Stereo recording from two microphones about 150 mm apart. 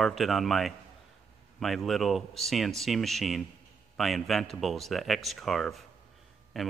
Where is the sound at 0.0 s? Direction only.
Centre (ahead or behind).